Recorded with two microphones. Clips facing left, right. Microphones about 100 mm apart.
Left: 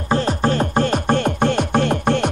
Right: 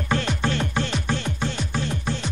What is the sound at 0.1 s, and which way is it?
Music, 40° left (ahead or behind).